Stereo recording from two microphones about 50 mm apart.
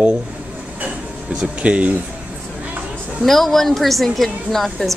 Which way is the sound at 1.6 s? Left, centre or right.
Right.